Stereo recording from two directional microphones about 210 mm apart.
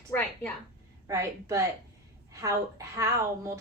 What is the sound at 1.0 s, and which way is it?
A woman's voice, 15° right (ahead or behind).